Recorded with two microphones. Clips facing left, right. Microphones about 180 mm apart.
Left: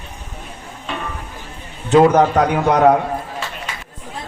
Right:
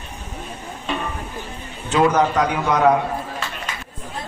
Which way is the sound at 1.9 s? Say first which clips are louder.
Left 6 dB; 40° left (ahead or behind).